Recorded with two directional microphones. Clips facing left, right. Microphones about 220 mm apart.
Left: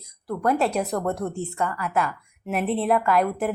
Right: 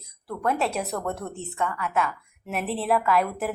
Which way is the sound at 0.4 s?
Centre (ahead or behind).